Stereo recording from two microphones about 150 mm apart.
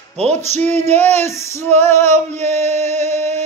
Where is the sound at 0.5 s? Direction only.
15° left (ahead or behind).